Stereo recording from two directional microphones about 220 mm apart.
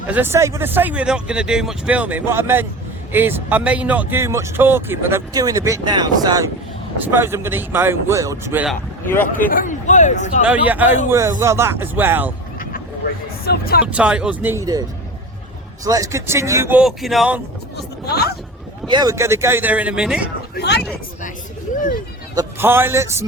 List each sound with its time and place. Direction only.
0.1 s speech: 10° right (ahead or behind)
9.5 s speech: 35° left (ahead or behind)
10.4 s speech: 5° right (ahead or behind)
13.4 s speech: 45° left (ahead or behind)
13.8 s speech: 5° right (ahead or behind)
18.1 s speech: 45° left (ahead or behind)
18.9 s speech: 15° right (ahead or behind)
21.8 s speech: 40° left (ahead or behind)
22.4 s a man's voice: 10° right (ahead or behind)